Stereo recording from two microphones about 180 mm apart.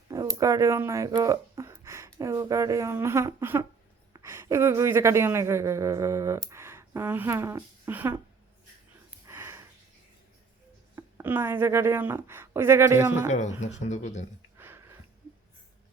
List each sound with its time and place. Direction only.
0.1 s a sound: 20° right (ahead or behind)
2.1 s a woman's voice: 15° right (ahead or behind)
9.2 s a sound: 15° right (ahead or behind)
10.9 s a woman's voice: 10° right (ahead or behind)
13.2 s speech: 40° left (ahead or behind)
14.5 s sniff: 15° right (ahead or behind)